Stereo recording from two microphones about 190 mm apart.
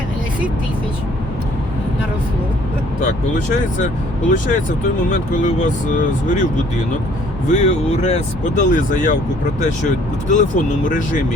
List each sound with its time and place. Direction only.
4.3 s speech: 45° left (ahead or behind)
7.4 s speech: 35° left (ahead or behind)